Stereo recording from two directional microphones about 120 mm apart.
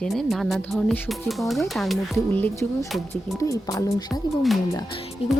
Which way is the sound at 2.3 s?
20° left (ahead or behind).